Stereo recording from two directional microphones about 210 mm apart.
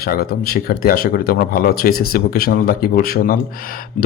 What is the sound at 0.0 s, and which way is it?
A man's voice, 45° left (ahead or behind).